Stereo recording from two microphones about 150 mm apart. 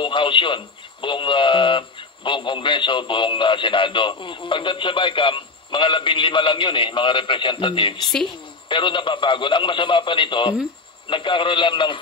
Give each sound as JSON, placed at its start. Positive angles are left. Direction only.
{"t": 0.0, "sound": "a man's voice", "side_deg": 35}